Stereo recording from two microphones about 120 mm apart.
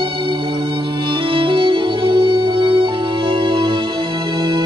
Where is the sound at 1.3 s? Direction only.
45° right (ahead or behind).